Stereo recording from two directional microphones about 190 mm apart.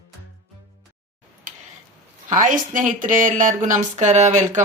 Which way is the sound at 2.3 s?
45° right (ahead or behind).